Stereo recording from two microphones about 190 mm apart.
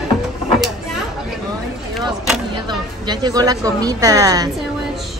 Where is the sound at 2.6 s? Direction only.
25° right (ahead or behind).